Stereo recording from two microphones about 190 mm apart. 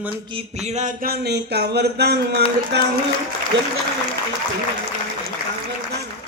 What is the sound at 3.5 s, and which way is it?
Speech, 75° right (ahead or behind).